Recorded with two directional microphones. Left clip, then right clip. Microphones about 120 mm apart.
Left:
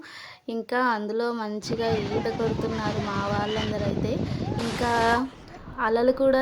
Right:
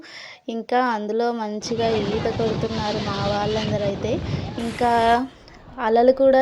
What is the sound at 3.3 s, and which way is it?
Speech, 20° right (ahead or behind).